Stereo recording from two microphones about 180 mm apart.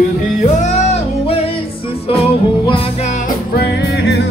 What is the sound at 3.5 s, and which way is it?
Music, 65° left (ahead or behind).